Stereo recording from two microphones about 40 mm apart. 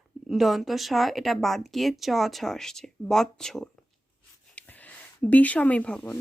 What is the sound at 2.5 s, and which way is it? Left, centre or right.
Speech, centre.